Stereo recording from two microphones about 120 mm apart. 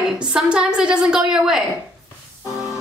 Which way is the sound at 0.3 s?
5° right (ahead or behind).